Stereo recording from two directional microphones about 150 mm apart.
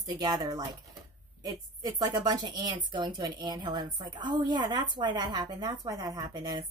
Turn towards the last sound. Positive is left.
turn(degrees=-25)  # may be behind; listen again after turning